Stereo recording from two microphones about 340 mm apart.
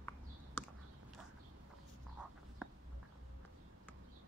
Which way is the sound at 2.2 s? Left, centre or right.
Centre.